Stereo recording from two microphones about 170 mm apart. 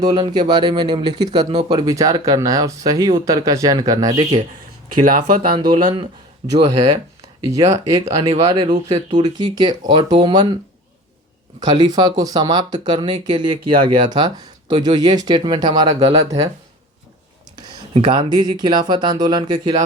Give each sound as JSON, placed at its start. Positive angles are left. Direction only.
{"t": 0.0, "sound": "speech", "side_deg": -25}
{"t": 4.9, "sound": "speech", "side_deg": -50}
{"t": 5.5, "sound": "speech", "side_deg": -30}
{"t": 6.4, "sound": "speech", "side_deg": -40}
{"t": 7.6, "sound": "speech", "side_deg": -20}
{"t": 11.6, "sound": "speech", "side_deg": -25}
{"t": 17.9, "sound": "speech", "side_deg": -30}